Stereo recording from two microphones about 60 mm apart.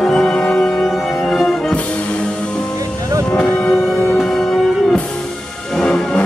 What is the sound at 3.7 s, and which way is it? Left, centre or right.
Music, left.